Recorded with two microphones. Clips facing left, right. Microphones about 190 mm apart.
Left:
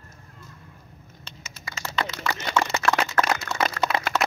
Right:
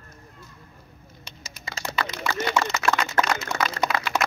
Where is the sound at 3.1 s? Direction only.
15° right (ahead or behind).